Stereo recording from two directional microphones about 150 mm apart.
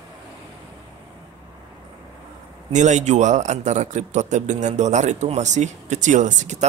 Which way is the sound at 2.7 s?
50° right (ahead or behind).